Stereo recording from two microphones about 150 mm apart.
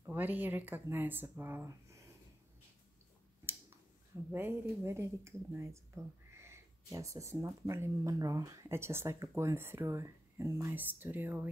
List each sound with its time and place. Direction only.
0.0 s speech: 10° right (ahead or behind)
4.3 s speech: 15° right (ahead or behind)